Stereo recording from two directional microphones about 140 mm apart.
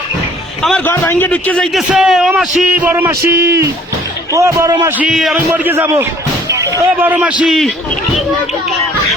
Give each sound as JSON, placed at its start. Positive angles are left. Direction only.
{"t": 0.9, "sound": "a man's voice", "side_deg": 15}
{"t": 4.9, "sound": "a man's voice", "side_deg": 0}
{"t": 7.4, "sound": "a man's voice", "side_deg": 0}